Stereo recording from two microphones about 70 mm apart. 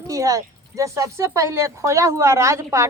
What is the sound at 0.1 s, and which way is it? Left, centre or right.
A woman's voice, right.